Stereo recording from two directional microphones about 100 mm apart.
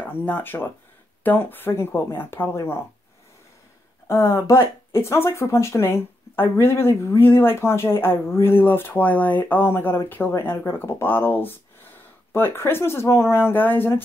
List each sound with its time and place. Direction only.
0.0 s speech: 15° left (ahead or behind)
4.1 s speech: 25° left (ahead or behind)